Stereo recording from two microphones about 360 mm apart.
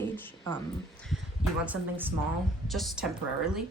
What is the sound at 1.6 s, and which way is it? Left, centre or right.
Speech, centre.